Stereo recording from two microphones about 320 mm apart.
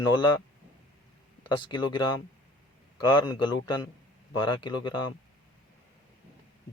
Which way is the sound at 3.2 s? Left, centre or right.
Centre.